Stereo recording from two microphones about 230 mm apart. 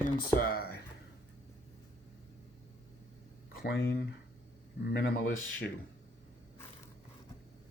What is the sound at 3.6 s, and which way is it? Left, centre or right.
Speech, left.